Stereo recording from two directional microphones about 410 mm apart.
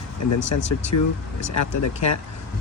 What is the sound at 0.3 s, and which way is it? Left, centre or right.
Speech, left.